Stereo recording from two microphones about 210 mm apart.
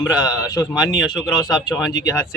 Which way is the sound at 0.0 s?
15° left (ahead or behind).